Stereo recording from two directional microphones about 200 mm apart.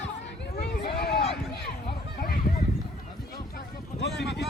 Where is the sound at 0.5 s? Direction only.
50° left (ahead or behind).